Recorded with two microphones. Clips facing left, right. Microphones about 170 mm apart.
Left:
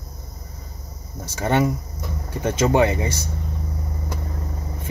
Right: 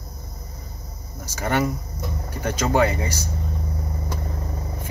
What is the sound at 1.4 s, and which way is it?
Speech, 25° left (ahead or behind).